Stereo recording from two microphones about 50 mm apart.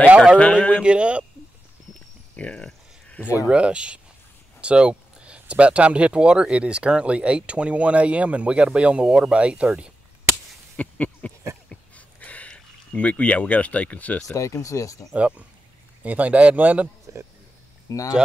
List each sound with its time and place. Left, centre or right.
0.4 s speech: left
0.8 s speech: right
2.3 s a sound: left
3.3 s speech: right
10.8 s a sound: left
14.3 s speech: left
15.1 s speech: right
17.8 s speech: left